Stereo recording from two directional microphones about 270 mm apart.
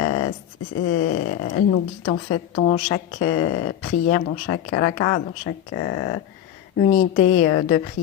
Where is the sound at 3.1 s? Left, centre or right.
Left.